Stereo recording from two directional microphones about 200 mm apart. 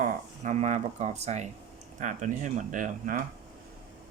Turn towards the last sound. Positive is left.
turn(degrees=-40)  # may be behind; listen again after turning